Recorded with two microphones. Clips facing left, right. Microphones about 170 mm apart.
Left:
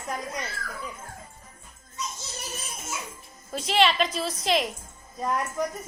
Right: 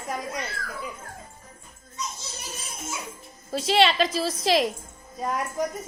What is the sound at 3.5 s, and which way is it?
A woman's voice, 30° right (ahead or behind).